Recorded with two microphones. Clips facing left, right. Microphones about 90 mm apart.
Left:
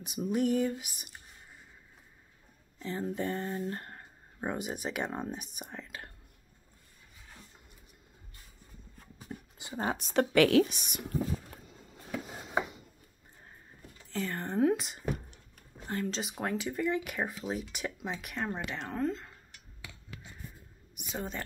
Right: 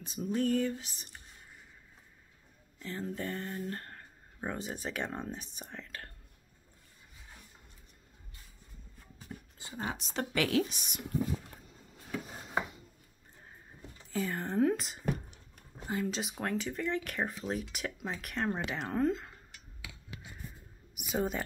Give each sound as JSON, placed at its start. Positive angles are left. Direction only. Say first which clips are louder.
{"t": 0.0, "sound": "a sound", "louder": "left 2 dB", "side_deg": 15}
{"t": 2.8, "sound": "a sound", "louder": "left 4 dB", "side_deg": 20}
{"t": 3.7, "sound": "speech", "louder": "left 1 dB", "side_deg": 20}
{"t": 9.8, "sound": "a woman's voice", "louder": "left 5 dB", "side_deg": 40}
{"t": 10.1, "sound": "speech", "louder": "left 7 dB", "side_deg": 65}
{"t": 14.1, "sound": "speech", "louder": "right 1 dB", "side_deg": -5}
{"t": 20.9, "sound": "speech", "louder": "right 5 dB", "side_deg": -5}